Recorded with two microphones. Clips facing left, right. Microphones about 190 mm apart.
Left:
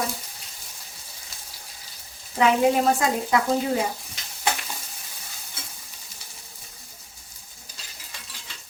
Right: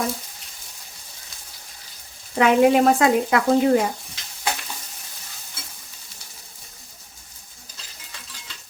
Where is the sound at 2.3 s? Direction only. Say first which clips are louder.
Right 4 dB; 65° right (ahead or behind).